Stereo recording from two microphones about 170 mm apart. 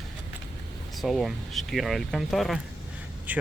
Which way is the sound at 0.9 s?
Centre (ahead or behind).